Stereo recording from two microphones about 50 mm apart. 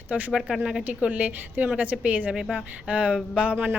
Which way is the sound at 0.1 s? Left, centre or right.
Right.